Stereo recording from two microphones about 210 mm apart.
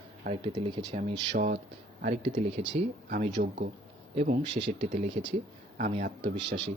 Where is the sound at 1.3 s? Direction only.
45° right (ahead or behind).